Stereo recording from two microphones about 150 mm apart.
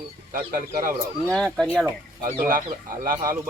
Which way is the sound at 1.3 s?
5° left (ahead or behind).